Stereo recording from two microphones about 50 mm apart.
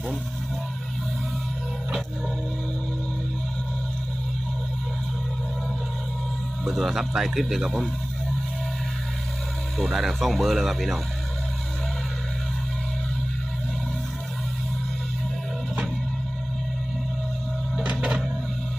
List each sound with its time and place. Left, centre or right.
6.7 s speech: centre
9.7 s speech: centre
17.8 s music: right